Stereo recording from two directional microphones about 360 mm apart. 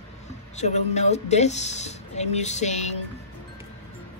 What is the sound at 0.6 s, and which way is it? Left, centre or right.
Speech, centre.